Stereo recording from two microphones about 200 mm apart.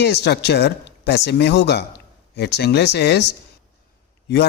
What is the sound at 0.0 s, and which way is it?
Speech, 55° left (ahead or behind).